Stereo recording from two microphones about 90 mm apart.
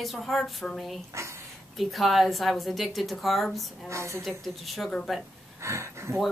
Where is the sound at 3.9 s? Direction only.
30° right (ahead or behind).